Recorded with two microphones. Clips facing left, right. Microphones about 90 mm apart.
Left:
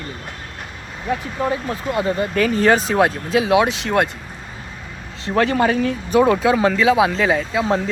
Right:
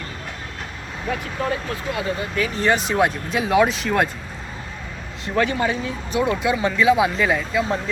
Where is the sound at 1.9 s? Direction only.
45° left (ahead or behind).